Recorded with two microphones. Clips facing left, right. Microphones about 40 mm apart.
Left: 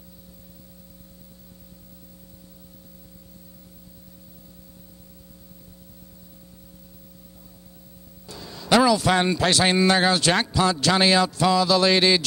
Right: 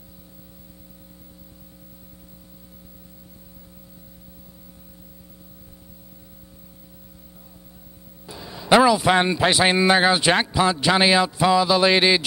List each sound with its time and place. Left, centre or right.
8.3 s a man's voice: centre